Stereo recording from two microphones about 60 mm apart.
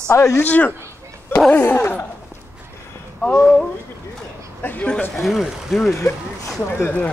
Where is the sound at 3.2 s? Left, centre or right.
Centre.